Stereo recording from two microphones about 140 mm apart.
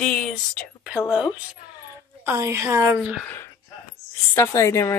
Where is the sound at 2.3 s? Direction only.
20° right (ahead or behind).